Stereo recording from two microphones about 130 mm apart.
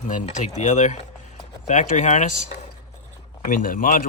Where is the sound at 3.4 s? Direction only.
90° left.